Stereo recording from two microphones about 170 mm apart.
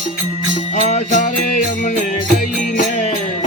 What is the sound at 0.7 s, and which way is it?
Music, 45° left (ahead or behind).